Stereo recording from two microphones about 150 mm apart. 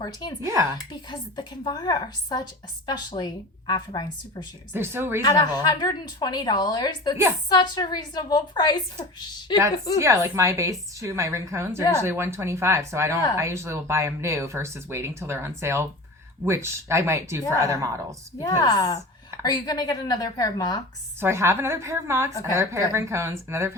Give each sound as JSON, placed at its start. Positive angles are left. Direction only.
{"t": 0.0, "sound": "a woman's voice", "side_deg": 30}
{"t": 0.4, "sound": "a woman's voice", "side_deg": -20}
{"t": 0.9, "sound": "a woman's voice", "side_deg": 30}
{"t": 4.7, "sound": "speech", "side_deg": -15}
{"t": 5.2, "sound": "a woman's voice", "side_deg": 25}
{"t": 10.0, "sound": "a woman's voice", "side_deg": -20}
{"t": 18.3, "sound": "a woman's voice", "side_deg": 25}
{"t": 21.2, "sound": "speech", "side_deg": -15}
{"t": 22.3, "sound": "a woman's voice", "side_deg": 20}
{"t": 22.7, "sound": "speech", "side_deg": -20}